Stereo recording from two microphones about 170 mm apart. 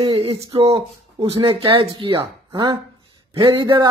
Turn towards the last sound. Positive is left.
turn(degrees=-30)  # may be behind; listen again after turning